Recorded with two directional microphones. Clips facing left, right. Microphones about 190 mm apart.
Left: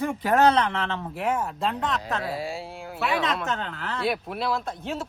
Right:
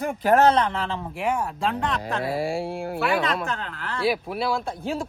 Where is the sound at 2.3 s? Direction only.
55° right (ahead or behind).